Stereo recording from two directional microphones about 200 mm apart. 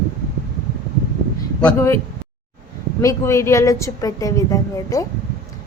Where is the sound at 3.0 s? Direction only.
15° left (ahead or behind).